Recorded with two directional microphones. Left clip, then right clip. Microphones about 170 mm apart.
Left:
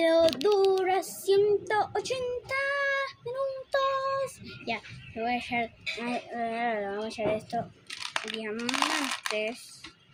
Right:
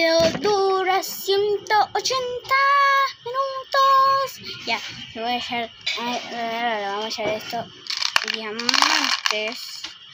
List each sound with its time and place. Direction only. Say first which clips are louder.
0.0 s child singing: right 5 dB; 15° left (ahead or behind)
3.7 s speech: right 13 dB; 15° left (ahead or behind)
7.9 s a sound: right 13 dB; centre (ahead or behind)
8.5 s speech: right 10 dB; 5° right (ahead or behind)